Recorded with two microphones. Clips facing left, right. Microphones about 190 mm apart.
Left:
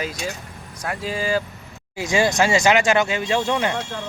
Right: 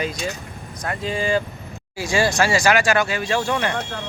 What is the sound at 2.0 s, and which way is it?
Speech, 20° left (ahead or behind).